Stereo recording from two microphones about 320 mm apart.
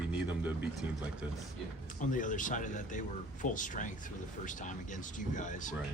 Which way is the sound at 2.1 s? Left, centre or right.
Left.